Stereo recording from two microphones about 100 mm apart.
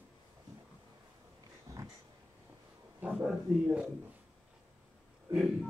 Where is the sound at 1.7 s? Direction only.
35° right (ahead or behind).